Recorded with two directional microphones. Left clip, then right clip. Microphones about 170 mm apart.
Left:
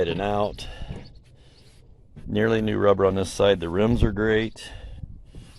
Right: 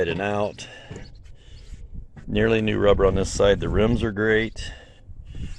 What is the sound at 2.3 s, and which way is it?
Speech, centre (ahead or behind).